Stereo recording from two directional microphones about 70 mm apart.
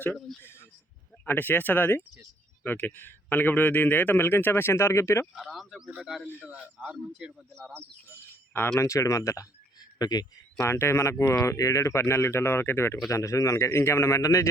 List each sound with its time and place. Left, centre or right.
0.4 s a sound: left
1.3 s a man's voice: left
5.3 s speech: centre
6.2 s a man's voice: left
6.7 s a man's voice: centre
8.8 s a man's voice: left
10.0 s speech: left
10.6 s speech: left
13.1 s a man's voice: left